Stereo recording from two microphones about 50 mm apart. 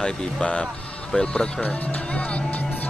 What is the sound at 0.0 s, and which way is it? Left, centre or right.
Speech, left.